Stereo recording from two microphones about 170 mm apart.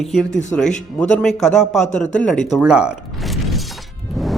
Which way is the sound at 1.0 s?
5° left (ahead or behind).